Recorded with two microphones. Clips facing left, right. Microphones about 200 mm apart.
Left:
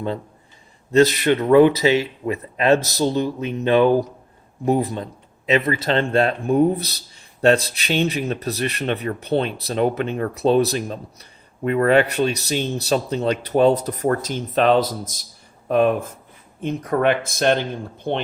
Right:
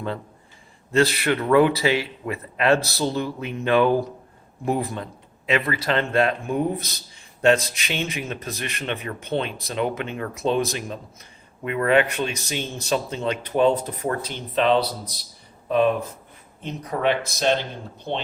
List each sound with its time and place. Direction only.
0.9 s speech: 20° left (ahead or behind); by 17.6 s 55° left (ahead or behind)